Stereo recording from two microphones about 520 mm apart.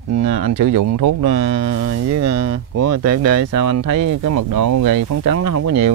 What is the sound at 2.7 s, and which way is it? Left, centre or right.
Speech, right.